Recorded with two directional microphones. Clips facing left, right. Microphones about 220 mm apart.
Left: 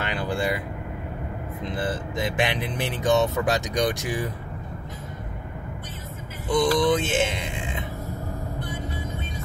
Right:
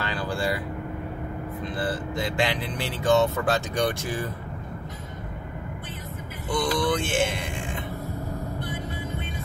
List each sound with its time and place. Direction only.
0.0 s vehicle: 20° left (ahead or behind)
1.6 s speech: 20° left (ahead or behind)
6.5 s speech: 20° left (ahead or behind)